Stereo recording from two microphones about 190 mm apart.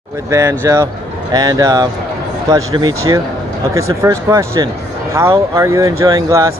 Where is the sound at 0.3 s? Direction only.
15° right (ahead or behind).